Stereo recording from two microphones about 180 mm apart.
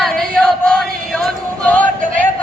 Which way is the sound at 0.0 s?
5° left (ahead or behind).